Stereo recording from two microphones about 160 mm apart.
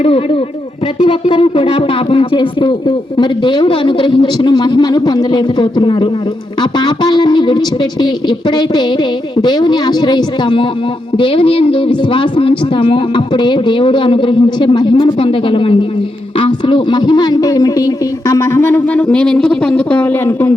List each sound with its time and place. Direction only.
0.0 s speech: 40° left (ahead or behind); by 20.5 s 10° left (ahead or behind)